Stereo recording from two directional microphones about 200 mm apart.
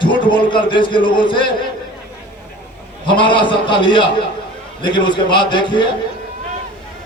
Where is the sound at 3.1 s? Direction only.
25° left (ahead or behind).